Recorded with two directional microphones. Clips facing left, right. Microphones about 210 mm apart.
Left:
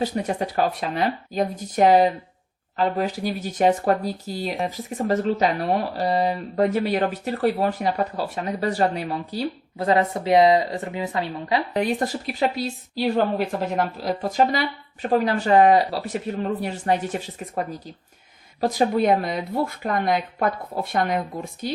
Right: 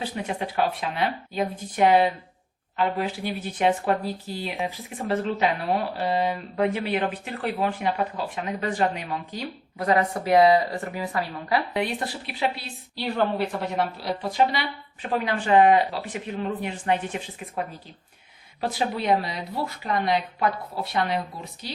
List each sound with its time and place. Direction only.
0.0 s speech: 40° left (ahead or behind); by 11.6 s 20° left (ahead or behind)
11.7 s speech: 40° left (ahead or behind)
14.0 s speech: 45° left (ahead or behind)